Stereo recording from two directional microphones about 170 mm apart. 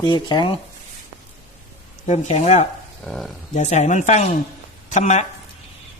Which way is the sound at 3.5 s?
45° left (ahead or behind).